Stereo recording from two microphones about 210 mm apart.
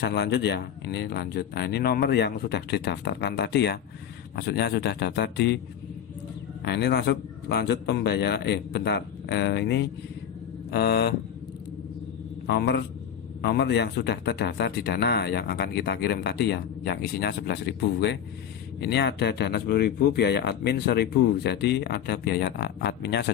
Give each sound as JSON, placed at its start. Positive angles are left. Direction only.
{"t": 0.0, "sound": "speech", "side_deg": 50}
{"t": 6.7, "sound": "speech", "side_deg": 50}
{"t": 12.5, "sound": "speech", "side_deg": 55}